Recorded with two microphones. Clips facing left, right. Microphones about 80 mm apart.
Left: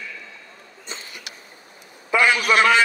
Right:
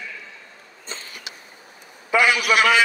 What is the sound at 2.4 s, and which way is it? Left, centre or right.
Speech, centre.